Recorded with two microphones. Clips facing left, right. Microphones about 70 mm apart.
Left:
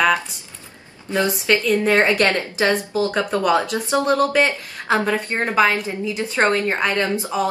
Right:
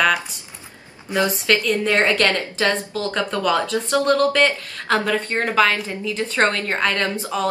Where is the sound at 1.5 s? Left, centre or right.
Centre.